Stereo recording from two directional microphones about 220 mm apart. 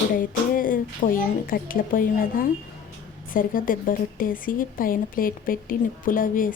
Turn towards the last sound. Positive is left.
turn(degrees=40)  # may be behind; listen again after turning